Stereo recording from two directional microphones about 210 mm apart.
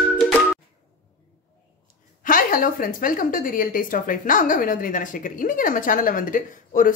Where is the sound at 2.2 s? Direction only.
40° left (ahead or behind).